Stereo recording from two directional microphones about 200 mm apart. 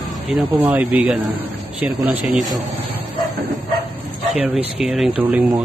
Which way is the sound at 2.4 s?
20° right (ahead or behind).